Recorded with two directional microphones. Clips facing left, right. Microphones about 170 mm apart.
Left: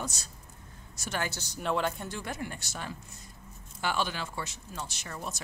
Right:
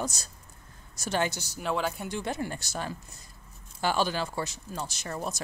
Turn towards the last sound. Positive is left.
turn(degrees=-40)  # may be behind; listen again after turning